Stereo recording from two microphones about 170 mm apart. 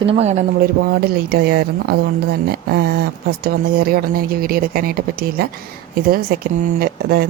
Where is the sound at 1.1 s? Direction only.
70° right (ahead or behind).